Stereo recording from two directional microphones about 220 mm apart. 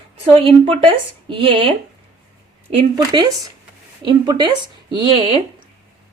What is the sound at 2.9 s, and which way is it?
Speech, 20° right (ahead or behind).